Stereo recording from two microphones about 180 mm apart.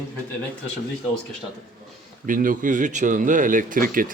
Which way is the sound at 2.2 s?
50° right (ahead or behind).